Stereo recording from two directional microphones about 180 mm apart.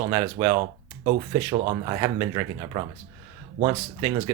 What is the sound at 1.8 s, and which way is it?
Speech, 20° right (ahead or behind).